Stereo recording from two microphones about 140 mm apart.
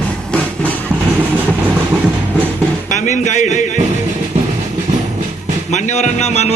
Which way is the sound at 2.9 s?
60° left (ahead or behind).